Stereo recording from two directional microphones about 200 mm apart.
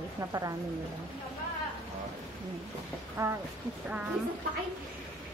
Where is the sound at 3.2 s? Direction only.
15° right (ahead or behind).